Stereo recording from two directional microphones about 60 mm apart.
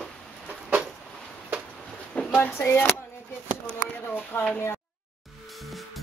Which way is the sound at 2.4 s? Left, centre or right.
Left.